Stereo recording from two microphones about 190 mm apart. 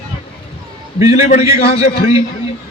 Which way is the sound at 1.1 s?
35° left (ahead or behind).